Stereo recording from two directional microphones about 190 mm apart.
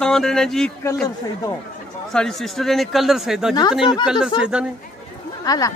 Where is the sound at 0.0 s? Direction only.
5° left (ahead or behind).